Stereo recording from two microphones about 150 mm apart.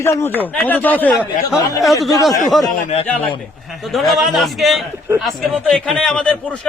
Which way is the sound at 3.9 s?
Centre (ahead or behind).